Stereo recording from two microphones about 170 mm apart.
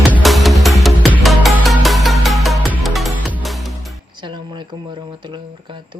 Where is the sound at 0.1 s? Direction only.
Centre (ahead or behind).